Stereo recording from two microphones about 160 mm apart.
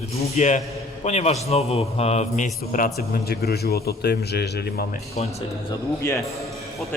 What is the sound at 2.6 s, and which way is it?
A man's voice, 60° left (ahead or behind).